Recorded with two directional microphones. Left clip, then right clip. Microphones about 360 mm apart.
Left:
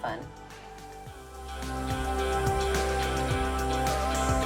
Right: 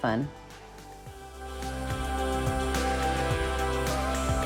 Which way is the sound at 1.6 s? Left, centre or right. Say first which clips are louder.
Left 2 dB; centre.